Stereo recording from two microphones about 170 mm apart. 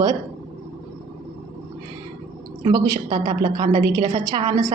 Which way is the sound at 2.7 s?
25° right (ahead or behind).